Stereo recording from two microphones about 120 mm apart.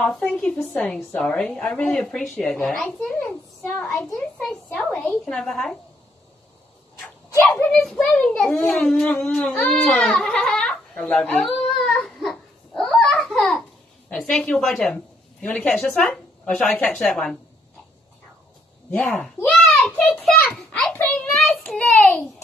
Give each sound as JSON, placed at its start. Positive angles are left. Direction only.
{"t": 0.0, "sound": "a woman's voice", "side_deg": 5}
{"t": 3.1, "sound": "a woman's voice", "side_deg": 15}
{"t": 3.8, "sound": "a woman's voice", "side_deg": 5}
{"t": 5.2, "sound": "a woman's voice", "side_deg": 5}
{"t": 7.6, "sound": "a woman's voice", "side_deg": 5}
{"t": 8.7, "sound": "crying", "side_deg": 5}
{"t": 15.4, "sound": "a woman's voice", "side_deg": 10}
{"t": 18.9, "sound": "a woman's voice", "side_deg": 10}
{"t": 21.3, "sound": "child singing", "side_deg": 0}